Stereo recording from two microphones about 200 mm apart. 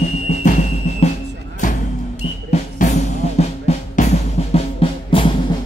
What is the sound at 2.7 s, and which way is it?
Drum, 35° left (ahead or behind).